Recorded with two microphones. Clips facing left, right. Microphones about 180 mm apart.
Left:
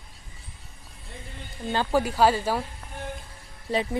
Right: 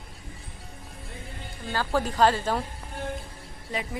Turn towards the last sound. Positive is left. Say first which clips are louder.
# left 6 dB
turn(degrees=30)  # may be behind; listen again after turning